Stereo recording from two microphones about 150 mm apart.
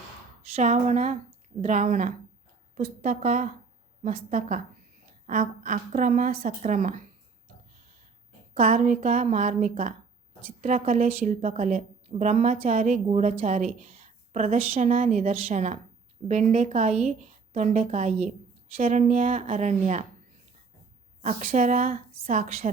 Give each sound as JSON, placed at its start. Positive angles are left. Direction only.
{"t": 0.5, "sound": "a woman's voice", "side_deg": -50}
{"t": 6.4, "sound": "a woman's voice", "side_deg": -50}
{"t": 8.5, "sound": "a woman's voice", "side_deg": -65}
{"t": 21.2, "sound": "a woman's voice", "side_deg": -55}